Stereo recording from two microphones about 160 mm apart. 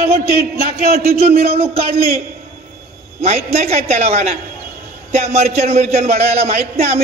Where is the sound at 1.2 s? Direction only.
40° right (ahead or behind).